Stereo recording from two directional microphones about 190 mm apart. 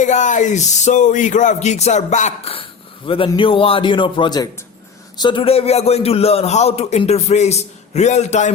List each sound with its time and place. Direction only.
0.0 s a man's voice: 40° left (ahead or behind)